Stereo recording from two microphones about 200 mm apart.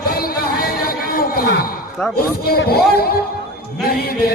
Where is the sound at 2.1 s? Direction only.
50° left (ahead or behind).